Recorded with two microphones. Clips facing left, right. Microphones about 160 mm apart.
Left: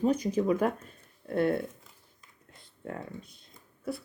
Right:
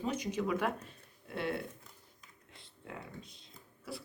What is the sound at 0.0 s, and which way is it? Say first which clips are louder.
Speech: left 8 dB; 35° left (ahead or behind).